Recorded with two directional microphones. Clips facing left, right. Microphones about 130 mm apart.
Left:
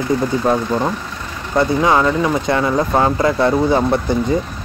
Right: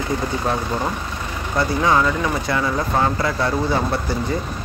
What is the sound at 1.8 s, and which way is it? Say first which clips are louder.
Speech: left 1 dB; 20° left (ahead or behind).